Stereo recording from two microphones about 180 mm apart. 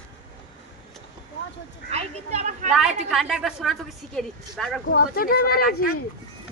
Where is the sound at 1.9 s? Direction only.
35° right (ahead or behind).